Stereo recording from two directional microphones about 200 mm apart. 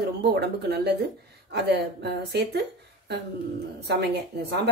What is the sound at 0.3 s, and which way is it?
Speech, 55° right (ahead or behind).